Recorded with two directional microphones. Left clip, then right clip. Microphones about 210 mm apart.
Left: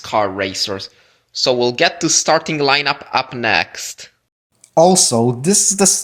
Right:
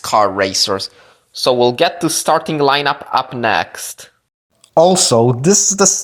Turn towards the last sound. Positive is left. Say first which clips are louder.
# right 2 dB
turn(degrees=-20)  # may be behind; listen again after turning